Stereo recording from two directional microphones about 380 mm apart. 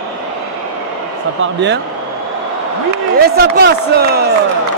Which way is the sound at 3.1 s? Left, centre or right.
Right.